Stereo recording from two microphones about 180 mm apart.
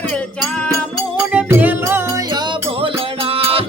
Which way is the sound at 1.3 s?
10° right (ahead or behind).